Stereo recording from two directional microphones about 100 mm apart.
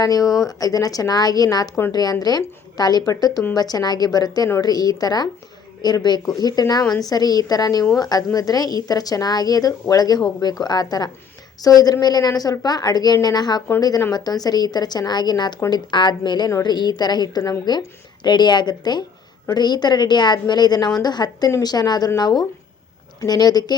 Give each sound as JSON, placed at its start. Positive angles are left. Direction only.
{"t": 0.0, "sound": "a woman's voice", "side_deg": 40}